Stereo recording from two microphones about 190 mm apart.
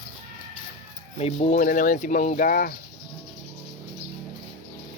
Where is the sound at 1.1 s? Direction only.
35° left (ahead or behind).